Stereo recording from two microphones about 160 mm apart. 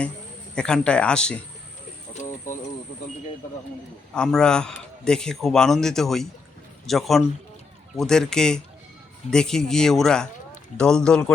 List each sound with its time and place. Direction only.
0.5 s a man's voice: 5° left (ahead or behind)
4.1 s a man's voice: 5° left (ahead or behind)